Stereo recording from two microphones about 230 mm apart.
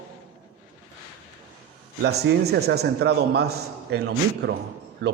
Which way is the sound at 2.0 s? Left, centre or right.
Right.